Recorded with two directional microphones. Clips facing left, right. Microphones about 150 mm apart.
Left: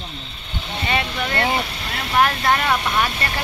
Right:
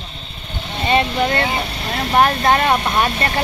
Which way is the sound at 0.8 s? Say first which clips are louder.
Right 7 dB; 30° right (ahead or behind).